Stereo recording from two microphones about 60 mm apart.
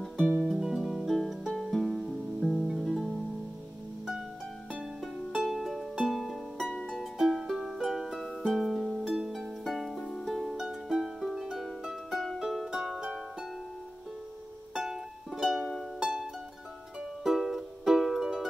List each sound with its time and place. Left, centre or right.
0.4 s music: centre
5.0 s music: centre
6.7 s music: centre
7.0 s music: centre
8.2 s music: centre
10.2 s harp: centre
14.7 s music: centre